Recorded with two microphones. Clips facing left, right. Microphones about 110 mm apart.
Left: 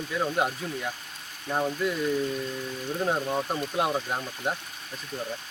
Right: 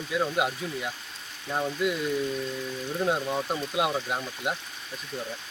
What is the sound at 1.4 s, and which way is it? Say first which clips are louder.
Speech: left 2 dB; 15° left (ahead or behind).